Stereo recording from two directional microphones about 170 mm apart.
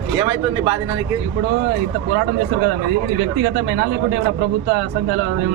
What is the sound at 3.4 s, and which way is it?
Speech, 90° right.